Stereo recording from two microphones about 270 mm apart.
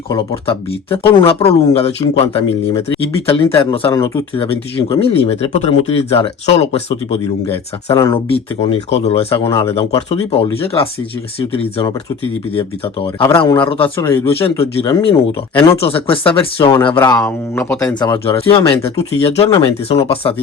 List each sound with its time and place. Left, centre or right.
0.1 s speech: centre
7.9 s speech: centre
8.9 s speech: left
14.0 s speech: centre
14.3 s speech: left
17.0 s speech: centre